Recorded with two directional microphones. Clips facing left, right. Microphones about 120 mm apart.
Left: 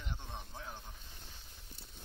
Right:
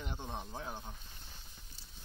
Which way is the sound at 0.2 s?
45° right (ahead or behind).